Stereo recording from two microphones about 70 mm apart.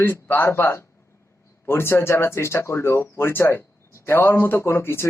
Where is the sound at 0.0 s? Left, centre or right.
Left.